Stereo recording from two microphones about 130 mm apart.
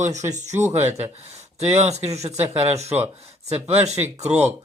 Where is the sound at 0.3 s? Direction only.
65° right (ahead or behind).